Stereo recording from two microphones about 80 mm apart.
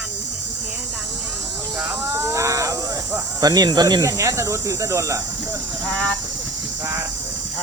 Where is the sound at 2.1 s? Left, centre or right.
Right.